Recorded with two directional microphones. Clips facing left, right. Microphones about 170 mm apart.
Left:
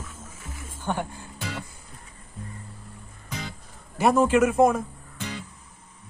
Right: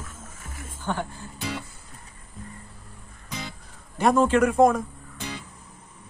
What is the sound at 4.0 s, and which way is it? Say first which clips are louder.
Speech: even; 10° left (ahead or behind).